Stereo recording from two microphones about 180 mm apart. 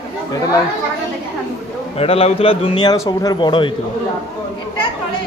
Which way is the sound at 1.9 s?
35° left (ahead or behind).